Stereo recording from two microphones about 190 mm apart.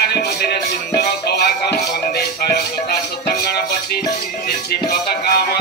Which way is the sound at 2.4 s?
55° left (ahead or behind).